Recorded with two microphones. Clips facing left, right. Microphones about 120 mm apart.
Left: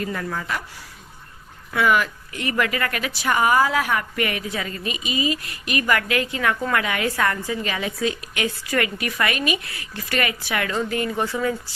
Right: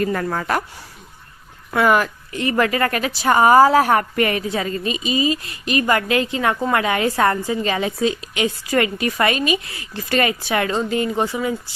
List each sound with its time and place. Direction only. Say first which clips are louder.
0.0 s speech: right 6 dB; 50° right (ahead or behind)
1.7 s speech: right 3 dB; 45° right (ahead or behind)
2.3 s a woman's voice: right 5 dB; 30° right (ahead or behind)